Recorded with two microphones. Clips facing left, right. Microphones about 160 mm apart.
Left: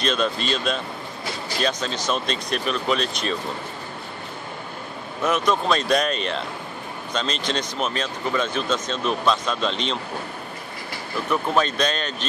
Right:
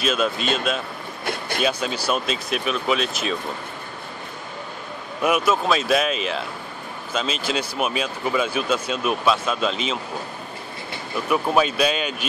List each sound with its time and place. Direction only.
0.0 s speech: 5° right (ahead or behind)
1.2 s a sound: 60° right (ahead or behind)
1.6 s speech: 10° right (ahead or behind)
5.2 s speech: 10° right (ahead or behind)
11.2 s speech: 10° right (ahead or behind)